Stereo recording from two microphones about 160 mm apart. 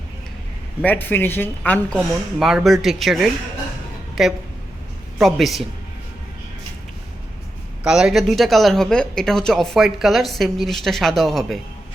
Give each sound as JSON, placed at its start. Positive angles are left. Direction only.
{"t": 0.8, "sound": "speech", "side_deg": 10}
{"t": 2.4, "sound": "a woman's voice", "side_deg": -5}
{"t": 7.9, "sound": "speech", "side_deg": -5}